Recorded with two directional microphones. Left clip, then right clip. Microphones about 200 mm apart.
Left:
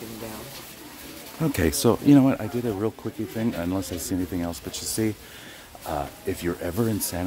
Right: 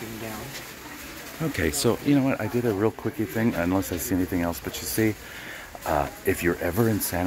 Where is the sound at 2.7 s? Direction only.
Centre (ahead or behind).